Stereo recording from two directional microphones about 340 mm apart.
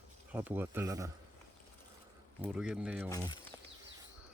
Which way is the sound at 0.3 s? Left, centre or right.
Centre.